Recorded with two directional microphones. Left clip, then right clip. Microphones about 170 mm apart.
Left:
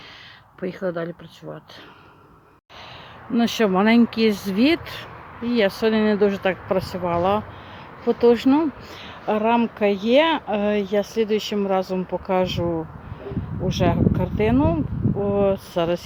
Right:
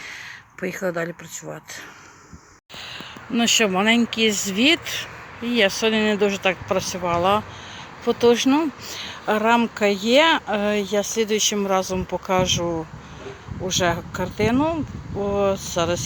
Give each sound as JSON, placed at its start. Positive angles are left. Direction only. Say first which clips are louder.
{"t": 0.6, "sound": "speech", "louder": "right 1 dB", "side_deg": 0}
{"t": 3.3, "sound": "speech", "louder": "right 1 dB", "side_deg": 20}
{"t": 13.7, "sound": "speech", "louder": "even", "side_deg": 10}